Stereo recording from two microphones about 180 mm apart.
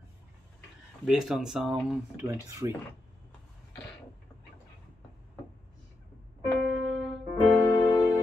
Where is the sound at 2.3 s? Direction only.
15° right (ahead or behind).